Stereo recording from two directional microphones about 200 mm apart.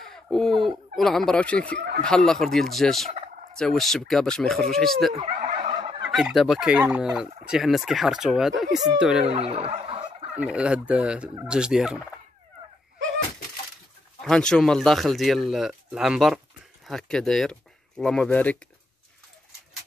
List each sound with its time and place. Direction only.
0.0 s speech: centre (ahead or behind)
5.1 s turkey: 30° right (ahead or behind)
6.1 s speech: centre (ahead or behind)
9.3 s gobble: 30° right (ahead or behind)
10.3 s speech: 5° right (ahead or behind)
14.2 s speech: 5° left (ahead or behind)